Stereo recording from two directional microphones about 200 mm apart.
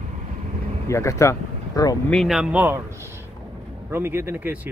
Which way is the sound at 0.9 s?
15° left (ahead or behind).